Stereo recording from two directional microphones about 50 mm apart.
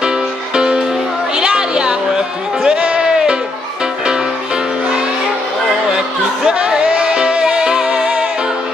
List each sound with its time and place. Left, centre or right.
0.0 s music: centre
2.6 s a sound: centre
6.4 s music: centre